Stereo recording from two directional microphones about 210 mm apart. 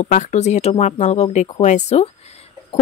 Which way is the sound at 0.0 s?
35° left (ahead or behind).